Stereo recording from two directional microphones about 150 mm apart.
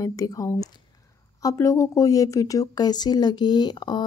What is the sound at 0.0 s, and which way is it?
Speech, 25° left (ahead or behind).